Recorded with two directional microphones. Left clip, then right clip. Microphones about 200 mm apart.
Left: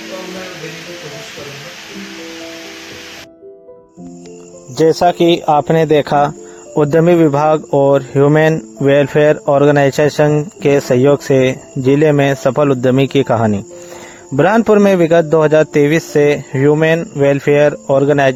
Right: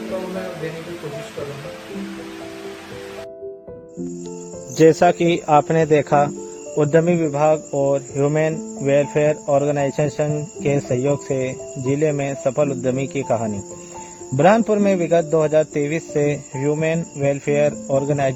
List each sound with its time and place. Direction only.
4.9 s speech: 25° left (ahead or behind); by 18.3 s 45° left (ahead or behind)